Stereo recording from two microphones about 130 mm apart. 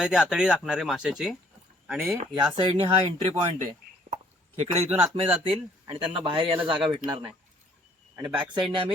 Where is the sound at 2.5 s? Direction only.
45° right (ahead or behind).